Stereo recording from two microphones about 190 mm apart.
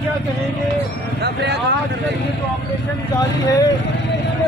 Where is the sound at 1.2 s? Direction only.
60° right (ahead or behind).